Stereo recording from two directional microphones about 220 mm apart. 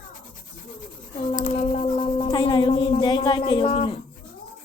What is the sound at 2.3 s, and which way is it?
Speech, 20° left (ahead or behind).